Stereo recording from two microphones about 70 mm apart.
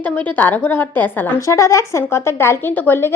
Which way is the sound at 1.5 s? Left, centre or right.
Left.